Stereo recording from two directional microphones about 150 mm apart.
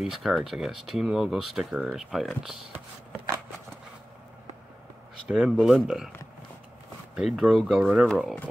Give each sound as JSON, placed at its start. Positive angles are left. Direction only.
{"t": 0.0, "sound": "speech", "side_deg": 0}
{"t": 5.3, "sound": "speech", "side_deg": 0}
{"t": 7.2, "sound": "speech", "side_deg": 0}